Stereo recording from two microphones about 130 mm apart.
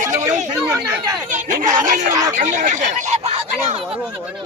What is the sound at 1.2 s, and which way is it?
Speech, 80° right.